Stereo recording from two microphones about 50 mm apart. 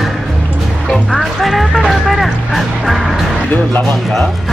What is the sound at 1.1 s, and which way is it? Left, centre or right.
Speech, centre.